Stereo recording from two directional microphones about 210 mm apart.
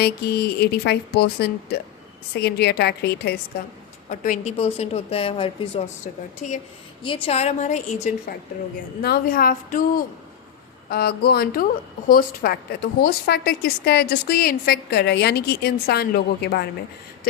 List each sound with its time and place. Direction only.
0.0 s a woman's voice: 50° left (ahead or behind)
4.1 s a woman's voice: 35° left (ahead or behind)
9.0 s a woman's voice: 45° left (ahead or behind)
10.8 s a woman's voice: 50° left (ahead or behind)